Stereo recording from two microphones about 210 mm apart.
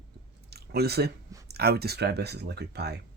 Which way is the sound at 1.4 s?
50° right (ahead or behind).